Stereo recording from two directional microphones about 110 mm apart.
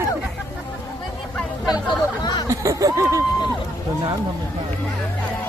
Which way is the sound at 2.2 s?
35° left (ahead or behind).